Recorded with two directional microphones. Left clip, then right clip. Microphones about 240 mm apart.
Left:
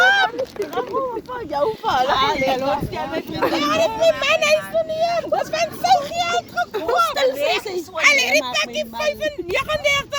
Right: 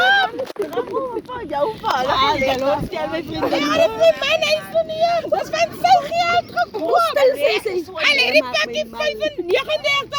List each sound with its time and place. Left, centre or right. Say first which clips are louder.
0.1 s a sound: right 1 dB; left
1.5 s speech: left 1 dB; left
4.2 s a child's voice: left 1 dB; left
4.9 s speech: right 3 dB; left
5.8 s speech: right 3 dB; left